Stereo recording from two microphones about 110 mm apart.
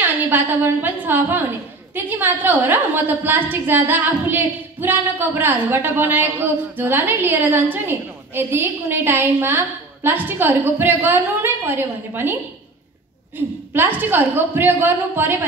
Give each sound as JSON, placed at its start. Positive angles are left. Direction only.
{"t": 0.0, "sound": "a woman's voice", "side_deg": -15}
{"t": 13.7, "sound": "a woman's voice", "side_deg": -20}